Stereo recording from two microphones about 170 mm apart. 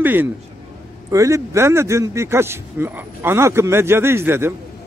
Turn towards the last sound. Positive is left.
turn(degrees=-15)  # may be behind; listen again after turning